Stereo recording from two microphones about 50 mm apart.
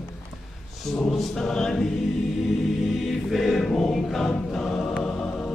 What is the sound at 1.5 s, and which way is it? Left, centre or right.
Choir, centre.